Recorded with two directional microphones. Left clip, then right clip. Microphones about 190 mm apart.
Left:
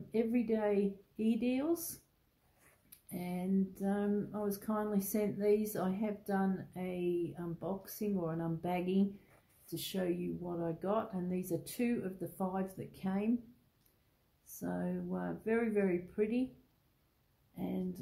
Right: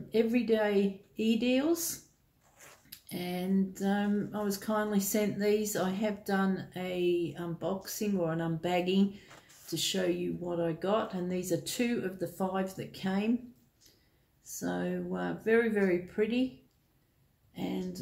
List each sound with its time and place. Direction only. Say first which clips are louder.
0.1 s speech: right 6 dB; 30° left (ahead or behind)
3.1 s speech: right 5 dB; 30° left (ahead or behind)
14.4 s speech: right 6 dB; 30° left (ahead or behind)